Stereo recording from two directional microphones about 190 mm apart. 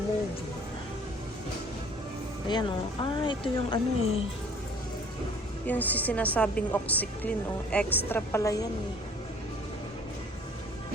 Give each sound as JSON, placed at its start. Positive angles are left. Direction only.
{"t": 2.5, "sound": "speech", "side_deg": 25}
{"t": 5.6, "sound": "a woman's voice", "side_deg": 10}